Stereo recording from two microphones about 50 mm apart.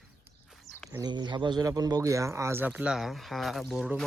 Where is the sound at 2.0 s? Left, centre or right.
Right.